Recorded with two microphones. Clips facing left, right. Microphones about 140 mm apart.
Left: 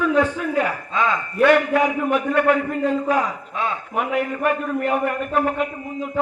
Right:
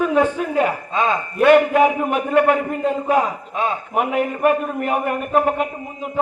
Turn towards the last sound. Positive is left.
turn(degrees=-20)  # may be behind; listen again after turning